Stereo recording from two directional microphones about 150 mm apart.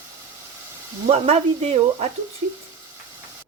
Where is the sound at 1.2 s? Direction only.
45° right (ahead or behind).